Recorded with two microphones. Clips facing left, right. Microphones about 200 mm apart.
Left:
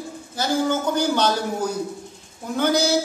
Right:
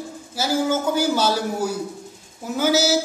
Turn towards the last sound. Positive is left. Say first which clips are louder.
# right 1 dB
turn(degrees=-5)  # may be behind; listen again after turning